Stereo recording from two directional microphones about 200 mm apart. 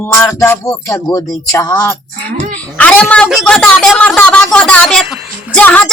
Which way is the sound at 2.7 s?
5° left (ahead or behind).